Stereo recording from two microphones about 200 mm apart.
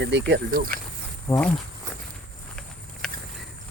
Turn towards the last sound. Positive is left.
turn(degrees=5)  # may be behind; listen again after turning